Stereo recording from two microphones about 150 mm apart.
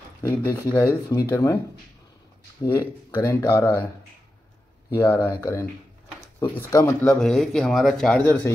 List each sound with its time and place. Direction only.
0.2 s speech: 20° left (ahead or behind)
2.6 s speech: 20° left (ahead or behind)
4.9 s speech: 15° left (ahead or behind)
6.4 s speech: 30° left (ahead or behind)
6.8 s speech: 10° left (ahead or behind)